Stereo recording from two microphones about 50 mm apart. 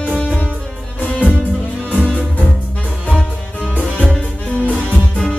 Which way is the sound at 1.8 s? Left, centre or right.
Left.